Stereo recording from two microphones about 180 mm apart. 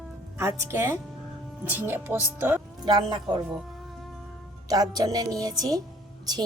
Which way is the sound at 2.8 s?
25° right (ahead or behind).